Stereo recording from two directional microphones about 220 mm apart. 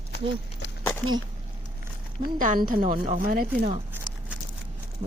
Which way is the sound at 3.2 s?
40° right (ahead or behind).